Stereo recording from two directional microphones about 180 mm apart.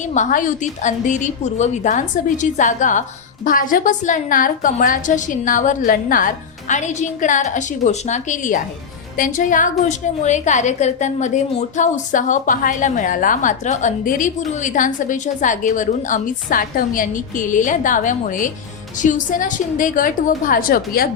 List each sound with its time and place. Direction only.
0.0 s a woman's voice: 45° left (ahead or behind)